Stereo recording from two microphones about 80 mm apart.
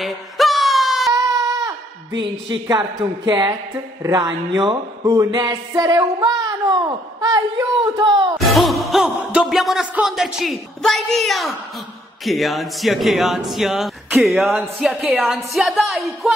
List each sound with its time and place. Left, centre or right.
0.0 s wail: centre
1.1 s a sound: right
2.7 s speech: right
5.8 s female singing: right
7.2 s speech: right
8.4 s music: centre